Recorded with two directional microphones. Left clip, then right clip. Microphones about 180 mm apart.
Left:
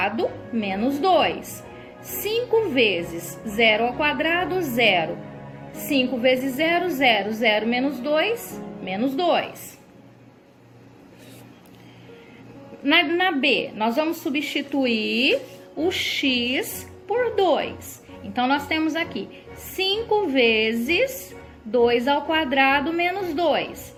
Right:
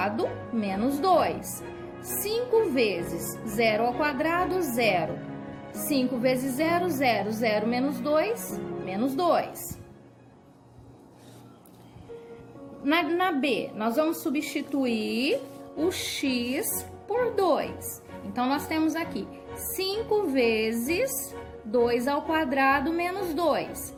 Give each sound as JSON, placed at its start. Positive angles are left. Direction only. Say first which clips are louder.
{"t": 0.0, "sound": "a woman's voice", "louder": "left 4 dB", "side_deg": -35}
{"t": 12.8, "sound": "a woman's voice", "louder": "left 6 dB", "side_deg": -35}